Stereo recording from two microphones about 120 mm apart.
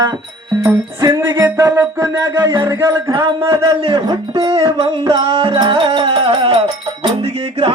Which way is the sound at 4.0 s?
35° right (ahead or behind).